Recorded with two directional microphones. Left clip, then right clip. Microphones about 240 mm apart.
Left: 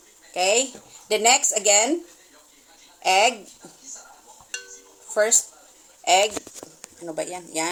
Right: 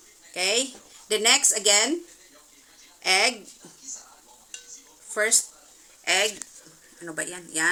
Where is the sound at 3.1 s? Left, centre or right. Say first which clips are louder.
Left 3 dB; left.